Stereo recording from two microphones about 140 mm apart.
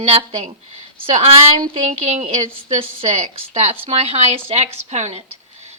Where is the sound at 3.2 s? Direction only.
50° right (ahead or behind).